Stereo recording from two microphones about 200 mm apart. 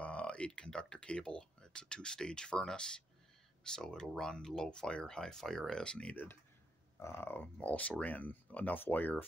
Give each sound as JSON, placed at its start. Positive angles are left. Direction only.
{"t": 0.0, "sound": "speech", "side_deg": 5}